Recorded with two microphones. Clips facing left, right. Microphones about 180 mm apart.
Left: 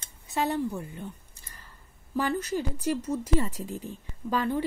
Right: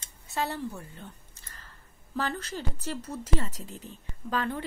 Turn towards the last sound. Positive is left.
turn(degrees=10)  # may be behind; listen again after turning